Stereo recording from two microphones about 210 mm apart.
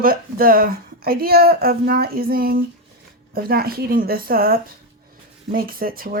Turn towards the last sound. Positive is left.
turn(degrees=-45)  # may be behind; listen again after turning